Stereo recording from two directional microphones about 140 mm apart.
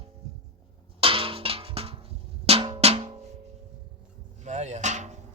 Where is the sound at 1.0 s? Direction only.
40° right (ahead or behind).